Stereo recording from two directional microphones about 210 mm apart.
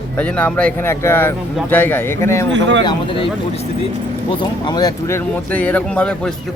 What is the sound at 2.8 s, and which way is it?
Speech, 25° left (ahead or behind).